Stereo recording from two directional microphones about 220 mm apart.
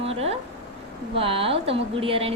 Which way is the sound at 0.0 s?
25° right (ahead or behind).